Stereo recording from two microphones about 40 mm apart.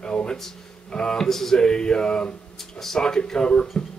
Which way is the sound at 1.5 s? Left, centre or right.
Centre.